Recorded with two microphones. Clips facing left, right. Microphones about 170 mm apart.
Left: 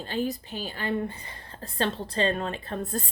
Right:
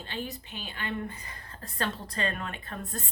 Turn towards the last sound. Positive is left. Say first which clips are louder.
# left 7 dB
turn(degrees=35)  # may be behind; listen again after turning